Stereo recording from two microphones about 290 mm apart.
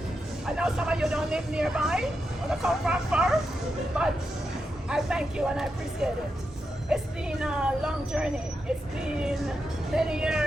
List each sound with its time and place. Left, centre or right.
0.4 s speech: centre